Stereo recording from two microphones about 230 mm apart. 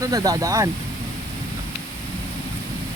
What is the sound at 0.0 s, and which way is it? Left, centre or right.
Speech, centre.